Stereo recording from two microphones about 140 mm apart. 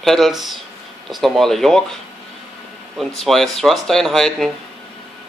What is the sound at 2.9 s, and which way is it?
Speech, centre (ahead or behind).